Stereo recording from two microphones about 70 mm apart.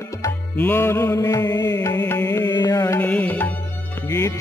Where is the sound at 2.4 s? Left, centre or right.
Left.